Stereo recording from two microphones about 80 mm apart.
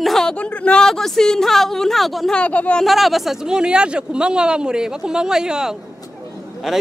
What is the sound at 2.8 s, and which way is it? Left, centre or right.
A man's voice, centre.